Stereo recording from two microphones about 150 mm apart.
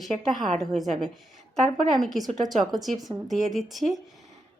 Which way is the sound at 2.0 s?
Centre (ahead or behind).